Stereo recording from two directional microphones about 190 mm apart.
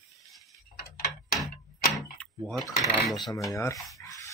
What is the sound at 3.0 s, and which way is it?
Speech, centre (ahead or behind).